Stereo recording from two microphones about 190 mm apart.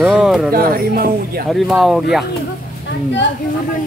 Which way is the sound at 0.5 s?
50° right (ahead or behind).